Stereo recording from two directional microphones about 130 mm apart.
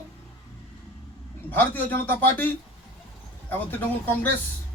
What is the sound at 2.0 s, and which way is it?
Speech, 15° left (ahead or behind).